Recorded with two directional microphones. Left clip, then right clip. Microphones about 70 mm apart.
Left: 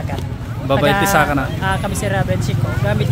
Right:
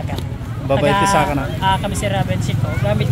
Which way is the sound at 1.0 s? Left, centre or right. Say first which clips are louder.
Left 1 dB; left.